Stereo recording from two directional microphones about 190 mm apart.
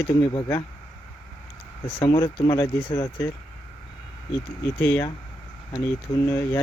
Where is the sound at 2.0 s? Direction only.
25° left (ahead or behind).